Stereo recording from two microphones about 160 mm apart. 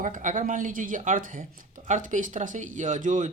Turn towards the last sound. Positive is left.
turn(degrees=-50)  # may be behind; listen again after turning